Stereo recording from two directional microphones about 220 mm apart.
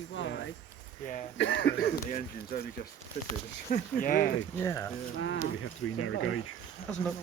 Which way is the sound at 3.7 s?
40° left (ahead or behind).